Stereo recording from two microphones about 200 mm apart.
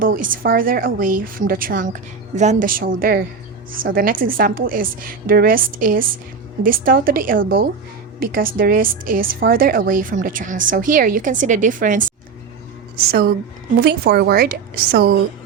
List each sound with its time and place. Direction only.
0.2 s a woman's voice: 45° right (ahead or behind)